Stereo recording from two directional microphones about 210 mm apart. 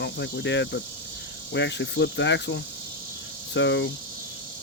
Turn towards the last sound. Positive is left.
turn(degrees=60)  # may be behind; listen again after turning